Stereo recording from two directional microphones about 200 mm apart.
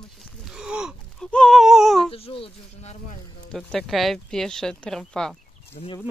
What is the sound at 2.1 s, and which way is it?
Insect, 30° left (ahead or behind).